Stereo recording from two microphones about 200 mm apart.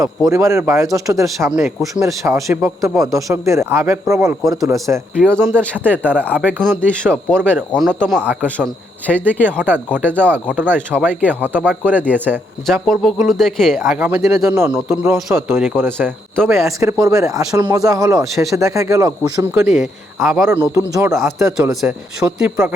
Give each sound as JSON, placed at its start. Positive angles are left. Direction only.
{"t": 0.3, "sound": "speech", "side_deg": -15}
{"t": 6.8, "sound": "speech", "side_deg": 5}
{"t": 8.4, "sound": "speech", "side_deg": 5}
{"t": 9.5, "sound": "speech", "side_deg": -10}
{"t": 14.0, "sound": "speech", "side_deg": -15}
{"t": 15.3, "sound": "speech", "side_deg": 0}
{"t": 16.6, "sound": "speech", "side_deg": -15}
{"t": 19.6, "sound": "speech", "side_deg": 0}
{"t": 20.5, "sound": "speech", "side_deg": -15}